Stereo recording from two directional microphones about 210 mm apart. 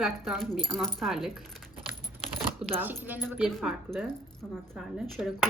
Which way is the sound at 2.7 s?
10° right (ahead or behind).